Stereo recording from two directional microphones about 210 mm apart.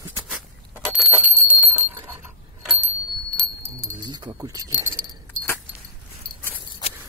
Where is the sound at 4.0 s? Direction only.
20° right (ahead or behind).